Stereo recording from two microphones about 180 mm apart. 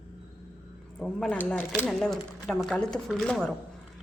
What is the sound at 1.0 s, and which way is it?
A woman's voice, 5° left (ahead or behind).